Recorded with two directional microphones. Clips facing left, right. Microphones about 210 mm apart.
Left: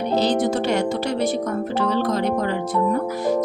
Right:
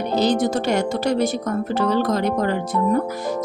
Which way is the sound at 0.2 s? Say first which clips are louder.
Right 2 dB; 45° right (ahead or behind).